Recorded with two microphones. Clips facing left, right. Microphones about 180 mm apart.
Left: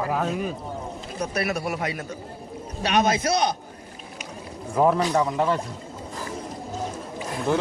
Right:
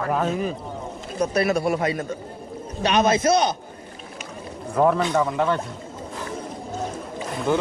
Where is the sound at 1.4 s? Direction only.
30° right (ahead or behind).